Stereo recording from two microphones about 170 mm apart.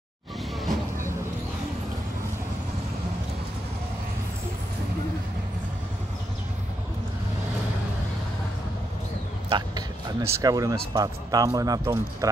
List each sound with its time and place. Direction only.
9.5 s speech: 20° right (ahead or behind)